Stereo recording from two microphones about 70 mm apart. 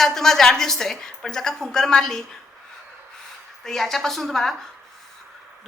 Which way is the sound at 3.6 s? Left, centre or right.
Centre.